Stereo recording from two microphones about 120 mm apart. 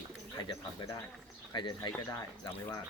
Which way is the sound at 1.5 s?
40° left (ahead or behind).